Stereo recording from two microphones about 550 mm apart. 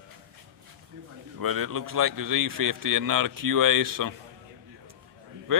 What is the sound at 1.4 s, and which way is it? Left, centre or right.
A man's voice, right.